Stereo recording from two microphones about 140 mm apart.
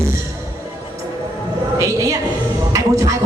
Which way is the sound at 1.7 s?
25° right (ahead or behind).